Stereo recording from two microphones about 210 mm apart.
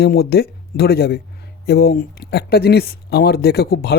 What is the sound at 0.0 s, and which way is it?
Speech, 50° left (ahead or behind).